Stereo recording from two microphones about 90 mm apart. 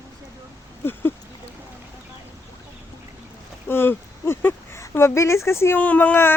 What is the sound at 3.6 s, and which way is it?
Speech, 25° left (ahead or behind).